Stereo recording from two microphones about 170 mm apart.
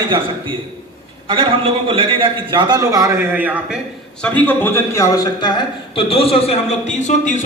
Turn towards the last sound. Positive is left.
turn(degrees=45)  # may be behind; listen again after turning